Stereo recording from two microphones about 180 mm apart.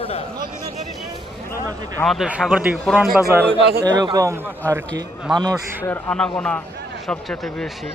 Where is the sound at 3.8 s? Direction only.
20° right (ahead or behind).